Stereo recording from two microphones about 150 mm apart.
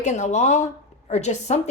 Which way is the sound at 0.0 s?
50° left (ahead or behind).